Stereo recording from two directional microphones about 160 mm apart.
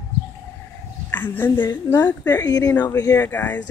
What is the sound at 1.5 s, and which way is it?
Speech, 25° left (ahead or behind).